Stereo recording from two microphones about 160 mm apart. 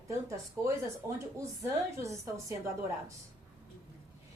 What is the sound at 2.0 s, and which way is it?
Speech, 20° right (ahead or behind).